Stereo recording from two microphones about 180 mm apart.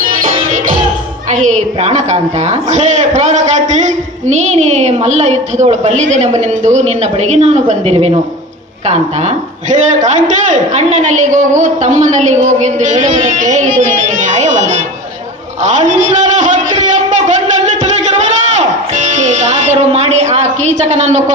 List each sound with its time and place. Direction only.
0.0 s music: 50° right (ahead or behind)
1.3 s a woman's voice: 40° right (ahead or behind)
10.1 s a man's voice: 40° right (ahead or behind)
15.6 s a sound: 40° right (ahead or behind)
18.5 s music: 40° right (ahead or behind)